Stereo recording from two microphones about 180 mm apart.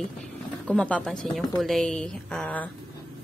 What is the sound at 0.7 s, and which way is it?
A woman's voice, 5° left (ahead or behind).